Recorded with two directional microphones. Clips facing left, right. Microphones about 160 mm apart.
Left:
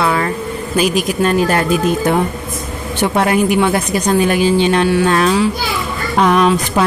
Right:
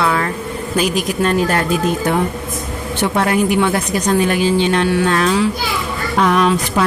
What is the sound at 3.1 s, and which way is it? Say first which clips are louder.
A woman's voice: left 2 dB; 15° left (ahead or behind).